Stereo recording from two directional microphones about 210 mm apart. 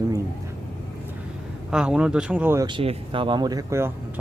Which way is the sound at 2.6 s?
25° right (ahead or behind).